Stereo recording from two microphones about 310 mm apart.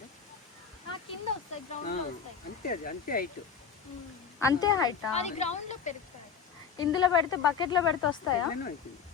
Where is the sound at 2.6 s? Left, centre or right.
Left.